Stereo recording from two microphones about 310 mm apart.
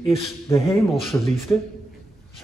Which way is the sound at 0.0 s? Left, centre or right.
Centre.